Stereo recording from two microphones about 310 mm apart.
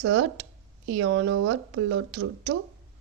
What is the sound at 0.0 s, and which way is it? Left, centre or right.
Speech, right.